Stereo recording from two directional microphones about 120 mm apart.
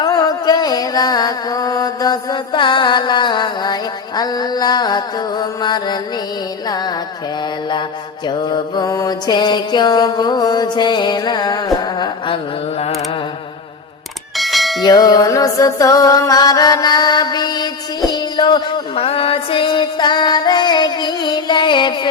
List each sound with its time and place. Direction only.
0.0 s music: 35° left (ahead or behind)
6.7 s mantra: 35° left (ahead or behind)
8.3 s mantra: 35° left (ahead or behind)
14.3 s bell: centre (ahead or behind)
14.8 s music: 35° left (ahead or behind)
18.9 s music: 55° left (ahead or behind)